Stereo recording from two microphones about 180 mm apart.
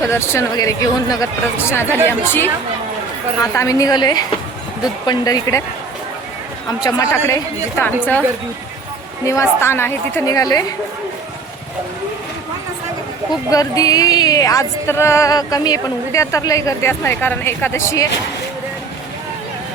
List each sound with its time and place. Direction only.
0.1 s speech: 15° left (ahead or behind)
6.8 s speech: 20° left (ahead or behind)
9.2 s speech: 15° left (ahead or behind)
13.5 s speech: 20° left (ahead or behind)